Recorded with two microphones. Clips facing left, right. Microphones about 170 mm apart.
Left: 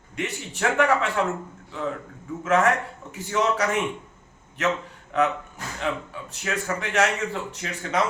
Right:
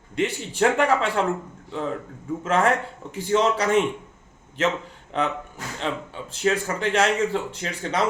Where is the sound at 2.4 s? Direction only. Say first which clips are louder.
Even; 30° right (ahead or behind).